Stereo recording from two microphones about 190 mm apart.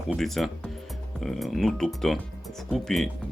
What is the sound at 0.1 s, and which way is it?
Speech, centre (ahead or behind).